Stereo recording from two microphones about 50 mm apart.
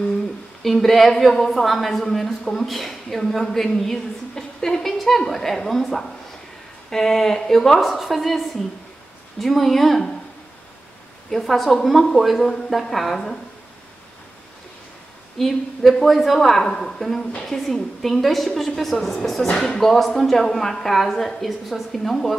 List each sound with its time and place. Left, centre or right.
0.6 s a woman's voice: centre
11.2 s a woman's voice: centre
15.3 s a woman's voice: centre
17.2 s a woman's voice: left
17.5 s a woman's voice: centre